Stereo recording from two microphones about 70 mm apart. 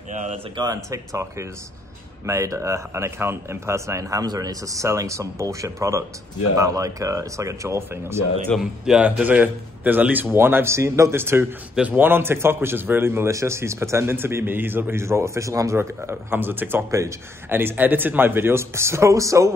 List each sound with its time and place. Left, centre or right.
0.7 s speech: right
8.5 s speech: centre
9.0 s a man's voice: right
11.7 s speech: centre
12.0 s a man's voice: right
13.3 s a man's voice: right